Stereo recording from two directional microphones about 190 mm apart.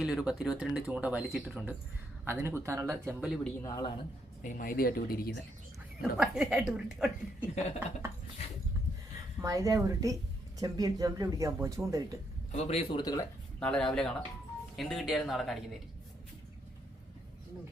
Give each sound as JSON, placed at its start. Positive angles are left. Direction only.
{"t": 0.0, "sound": "speech", "side_deg": -5}
{"t": 3.2, "sound": "speech", "side_deg": 0}
{"t": 3.6, "sound": "a man's voice", "side_deg": 20}
{"t": 4.4, "sound": "speech", "side_deg": 45}
{"t": 6.0, "sound": "speech", "side_deg": -5}
{"t": 9.4, "sound": "speech", "side_deg": -15}
{"t": 12.5, "sound": "a man's voice", "side_deg": 35}
{"t": 13.0, "sound": "a man's voice", "side_deg": 20}
{"t": 13.6, "sound": "speech", "side_deg": 5}